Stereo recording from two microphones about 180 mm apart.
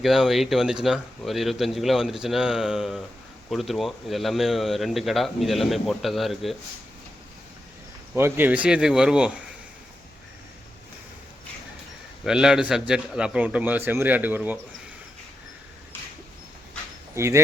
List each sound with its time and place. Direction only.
0.0 s speech: centre (ahead or behind)
8.1 s speech: 10° right (ahead or behind)
12.2 s speech: 5° right (ahead or behind)
17.2 s speech: 15° right (ahead or behind)